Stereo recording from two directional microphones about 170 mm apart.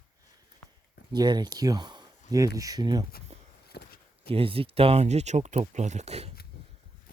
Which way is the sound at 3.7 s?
70° left (ahead or behind).